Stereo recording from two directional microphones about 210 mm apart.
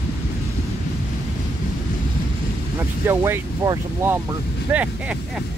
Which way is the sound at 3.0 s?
10° right (ahead or behind).